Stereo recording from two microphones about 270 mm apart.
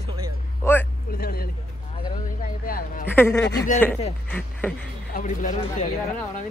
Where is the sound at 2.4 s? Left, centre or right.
Left.